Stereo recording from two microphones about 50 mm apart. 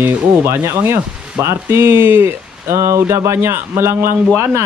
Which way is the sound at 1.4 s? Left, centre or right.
Right.